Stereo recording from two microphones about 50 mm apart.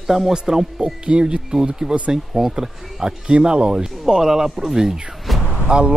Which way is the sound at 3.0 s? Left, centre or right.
Centre.